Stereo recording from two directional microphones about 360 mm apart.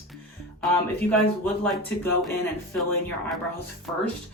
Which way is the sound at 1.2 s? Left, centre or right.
Centre.